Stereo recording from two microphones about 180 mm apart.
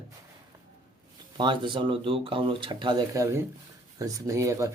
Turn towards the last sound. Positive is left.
turn(degrees=-15)  # may be behind; listen again after turning